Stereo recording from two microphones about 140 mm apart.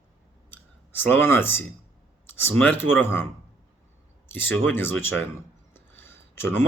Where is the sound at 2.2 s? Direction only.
15° left (ahead or behind).